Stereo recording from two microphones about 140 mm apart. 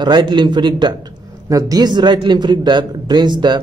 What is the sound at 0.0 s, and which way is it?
A man's voice, 30° right (ahead or behind).